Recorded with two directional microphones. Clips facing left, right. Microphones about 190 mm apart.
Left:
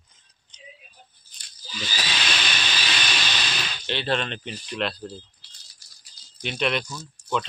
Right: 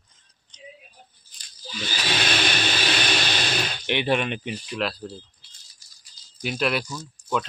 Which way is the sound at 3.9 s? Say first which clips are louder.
Right 3 dB; 15° right (ahead or behind).